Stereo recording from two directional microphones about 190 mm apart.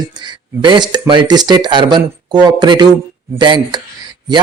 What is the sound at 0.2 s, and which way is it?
Speech, 25° right (ahead or behind).